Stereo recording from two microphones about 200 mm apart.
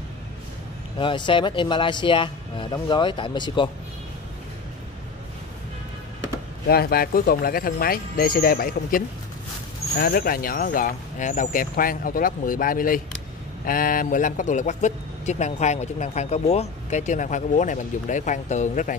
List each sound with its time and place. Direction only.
0.9 s speech: 25° left (ahead or behind)
6.7 s speech: 50° left (ahead or behind)